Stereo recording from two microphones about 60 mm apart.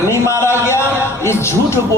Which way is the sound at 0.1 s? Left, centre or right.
Left.